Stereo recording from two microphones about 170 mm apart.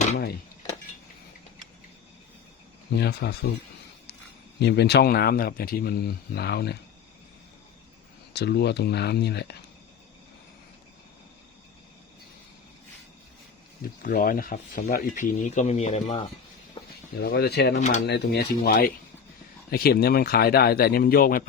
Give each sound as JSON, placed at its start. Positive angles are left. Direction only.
{"t": 2.9, "sound": "speech", "side_deg": 70}
{"t": 4.6, "sound": "speech", "side_deg": 75}
{"t": 8.3, "sound": "speech", "side_deg": 75}
{"t": 13.8, "sound": "speech", "side_deg": 55}
{"t": 17.2, "sound": "speech", "side_deg": 65}
{"t": 17.7, "sound": "speech", "side_deg": 45}
{"t": 18.0, "sound": "speech", "side_deg": 80}